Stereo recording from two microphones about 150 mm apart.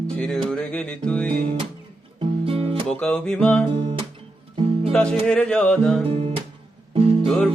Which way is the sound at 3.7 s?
40° right (ahead or behind).